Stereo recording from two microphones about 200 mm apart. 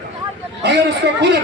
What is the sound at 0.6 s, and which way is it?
Speech, 60° right (ahead or behind).